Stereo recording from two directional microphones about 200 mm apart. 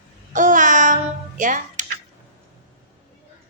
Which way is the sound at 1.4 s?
40° right (ahead or behind).